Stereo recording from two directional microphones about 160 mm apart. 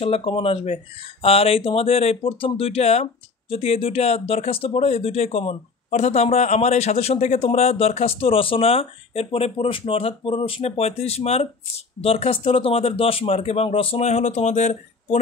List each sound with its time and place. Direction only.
0.0 s speech: 35° left (ahead or behind)